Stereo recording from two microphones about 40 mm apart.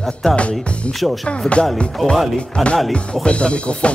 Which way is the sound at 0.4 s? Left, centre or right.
Left.